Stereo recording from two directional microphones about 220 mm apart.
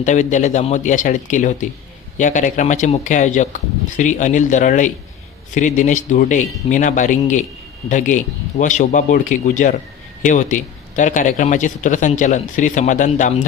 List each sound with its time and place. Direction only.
0.0 s speech: 35° left (ahead or behind)